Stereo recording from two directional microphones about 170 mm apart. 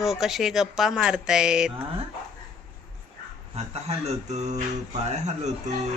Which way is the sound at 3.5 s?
40° right (ahead or behind).